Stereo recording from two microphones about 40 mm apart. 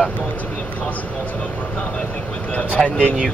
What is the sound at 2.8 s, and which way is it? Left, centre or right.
Speech, left.